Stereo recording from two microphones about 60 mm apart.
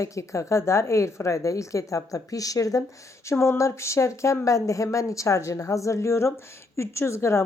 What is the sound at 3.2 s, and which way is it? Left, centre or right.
A woman's voice, left.